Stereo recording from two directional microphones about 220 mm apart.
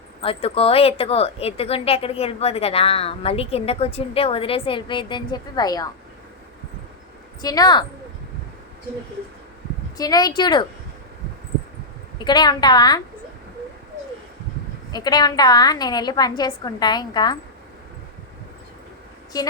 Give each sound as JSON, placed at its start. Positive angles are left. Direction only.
{"t": 0.2, "sound": "a woman's voice", "side_deg": 25}
{"t": 7.4, "sound": "a woman's voice", "side_deg": 15}
{"t": 10.0, "sound": "a woman's voice", "side_deg": 15}
{"t": 12.2, "sound": "a woman's voice", "side_deg": 20}
{"t": 14.9, "sound": "a woman's voice", "side_deg": 20}